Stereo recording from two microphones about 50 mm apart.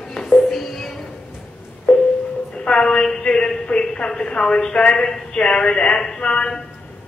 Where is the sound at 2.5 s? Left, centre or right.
Centre.